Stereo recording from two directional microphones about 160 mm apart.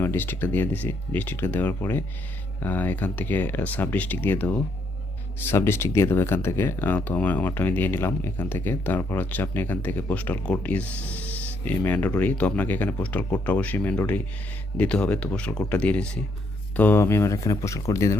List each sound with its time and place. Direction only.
0.0 s speech: 15° left (ahead or behind)